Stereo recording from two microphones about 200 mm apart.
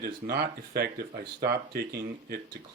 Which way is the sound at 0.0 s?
55° right (ahead or behind).